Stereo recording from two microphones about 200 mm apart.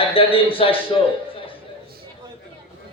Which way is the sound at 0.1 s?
25° left (ahead or behind).